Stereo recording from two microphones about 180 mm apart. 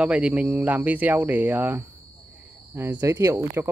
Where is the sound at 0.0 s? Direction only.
5° right (ahead or behind).